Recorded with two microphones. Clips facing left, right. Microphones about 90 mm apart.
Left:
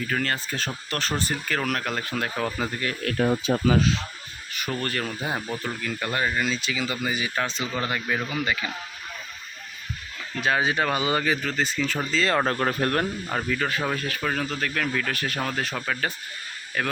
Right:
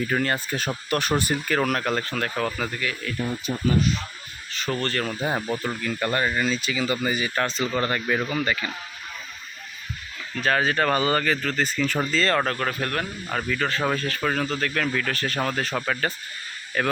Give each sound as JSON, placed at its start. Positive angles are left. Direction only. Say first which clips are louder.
{"t": 0.1, "sound": "speech", "louder": "right 3 dB", "side_deg": -15}
{"t": 3.0, "sound": "speech", "louder": "left 5 dB", "side_deg": 70}
{"t": 4.7, "sound": "speech", "louder": "right 3 dB", "side_deg": 5}
{"t": 10.3, "sound": "speech", "louder": "right 1 dB", "side_deg": 10}
{"t": 12.2, "sound": "speech", "louder": "even", "side_deg": 10}
{"t": 12.5, "sound": "speech", "louder": "left 2 dB", "side_deg": 25}
{"t": 13.2, "sound": "speech", "louder": "even", "side_deg": 5}